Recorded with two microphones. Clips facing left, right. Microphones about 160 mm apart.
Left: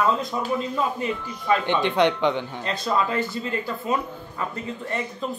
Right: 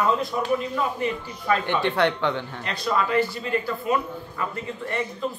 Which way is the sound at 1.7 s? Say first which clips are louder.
Left 3 dB; 15° left (ahead or behind).